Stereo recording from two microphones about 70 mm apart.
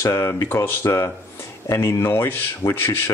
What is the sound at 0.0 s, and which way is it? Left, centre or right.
Speech, left.